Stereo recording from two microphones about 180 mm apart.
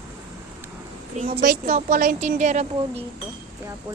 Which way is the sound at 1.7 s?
50° right (ahead or behind).